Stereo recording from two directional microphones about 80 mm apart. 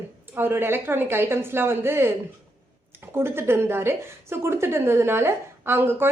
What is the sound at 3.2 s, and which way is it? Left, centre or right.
A woman's voice, right.